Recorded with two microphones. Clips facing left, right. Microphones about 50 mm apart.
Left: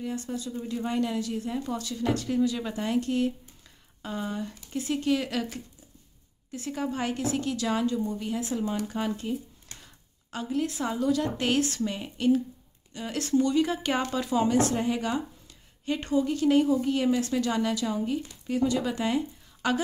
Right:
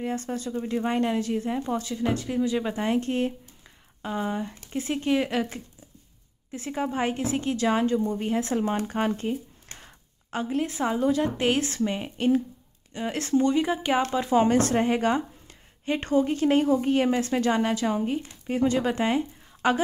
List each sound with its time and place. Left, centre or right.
0.0 s a woman's voice: right
4.0 s a woman's voice: right
14.3 s a woman's voice: right